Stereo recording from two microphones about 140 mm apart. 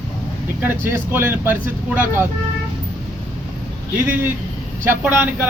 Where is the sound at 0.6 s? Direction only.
15° right (ahead or behind).